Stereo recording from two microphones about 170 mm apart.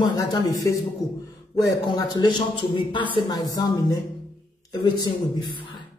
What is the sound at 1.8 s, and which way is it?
A man's voice, 25° left (ahead or behind).